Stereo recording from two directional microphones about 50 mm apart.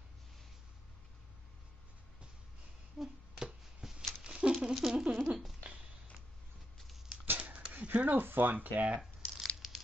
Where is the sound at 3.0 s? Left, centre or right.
Centre.